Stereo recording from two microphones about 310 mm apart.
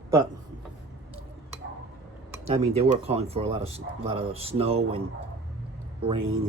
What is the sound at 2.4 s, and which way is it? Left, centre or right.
Speech, centre.